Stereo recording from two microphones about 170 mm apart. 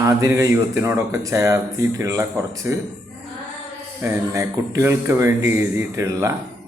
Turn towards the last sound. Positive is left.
turn(degrees=-20)  # may be behind; listen again after turning